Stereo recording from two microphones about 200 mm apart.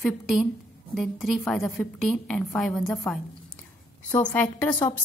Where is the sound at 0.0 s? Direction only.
Centre (ahead or behind).